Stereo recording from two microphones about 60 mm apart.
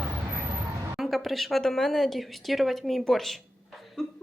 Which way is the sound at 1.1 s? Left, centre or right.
Centre.